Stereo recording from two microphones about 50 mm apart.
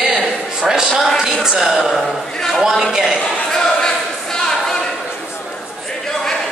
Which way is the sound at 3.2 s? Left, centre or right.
Centre.